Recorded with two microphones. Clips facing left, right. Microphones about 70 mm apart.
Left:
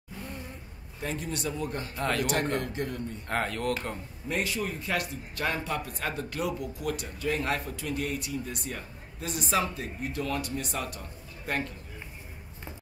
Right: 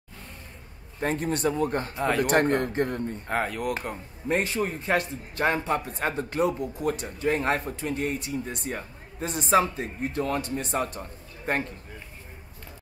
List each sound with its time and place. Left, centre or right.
1.0 s speech: right
2.0 s speech: centre
2.4 s speech: right
3.3 s speech: centre
4.3 s speech: right